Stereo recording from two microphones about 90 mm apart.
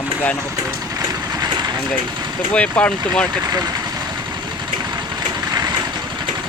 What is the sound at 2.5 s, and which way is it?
Speech, 15° left (ahead or behind).